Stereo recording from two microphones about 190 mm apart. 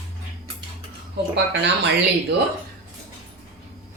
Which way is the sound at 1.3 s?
65° right (ahead or behind).